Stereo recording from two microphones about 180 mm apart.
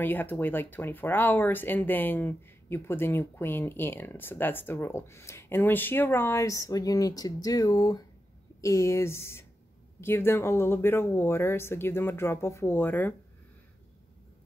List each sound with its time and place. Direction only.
0.0 s speech: 10° left (ahead or behind)